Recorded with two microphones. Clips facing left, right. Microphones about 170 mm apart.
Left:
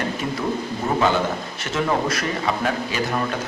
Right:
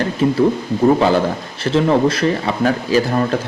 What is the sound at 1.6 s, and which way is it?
Speech, 30° right (ahead or behind).